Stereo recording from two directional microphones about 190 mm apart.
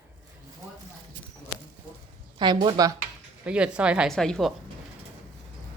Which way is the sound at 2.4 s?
25° right (ahead or behind).